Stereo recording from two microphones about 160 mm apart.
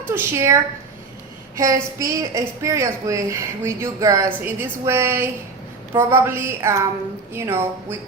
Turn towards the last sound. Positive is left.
turn(degrees=-15)  # may be behind; listen again after turning